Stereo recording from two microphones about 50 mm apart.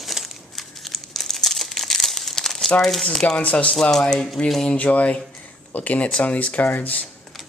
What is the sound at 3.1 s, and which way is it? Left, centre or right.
Speech, centre.